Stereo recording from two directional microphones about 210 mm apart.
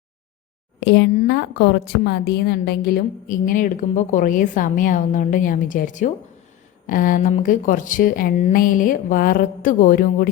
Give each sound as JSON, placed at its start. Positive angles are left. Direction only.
{"t": 0.8, "sound": "a woman's voice", "side_deg": 55}